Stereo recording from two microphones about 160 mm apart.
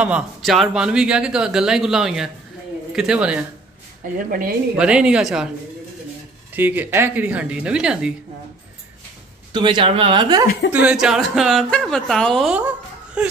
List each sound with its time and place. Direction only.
0.0 s speech: 5° right (ahead or behind)
4.2 s speech: 60° right (ahead or behind)
4.7 s speech: 5° right (ahead or behind)
6.5 s speech: 10° right (ahead or behind)
9.5 s speech: 30° right (ahead or behind)
10.7 s speech: 5° right (ahead or behind)